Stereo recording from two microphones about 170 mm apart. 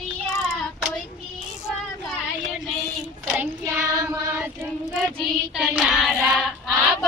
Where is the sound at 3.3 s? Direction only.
15° right (ahead or behind).